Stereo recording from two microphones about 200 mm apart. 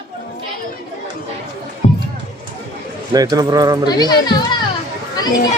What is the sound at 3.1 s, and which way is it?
Speech, 20° right (ahead or behind).